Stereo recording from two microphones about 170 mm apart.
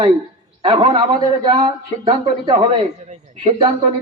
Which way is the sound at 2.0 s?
30° right (ahead or behind).